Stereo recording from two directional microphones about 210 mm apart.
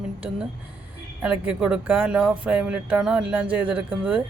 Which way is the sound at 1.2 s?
5° right (ahead or behind).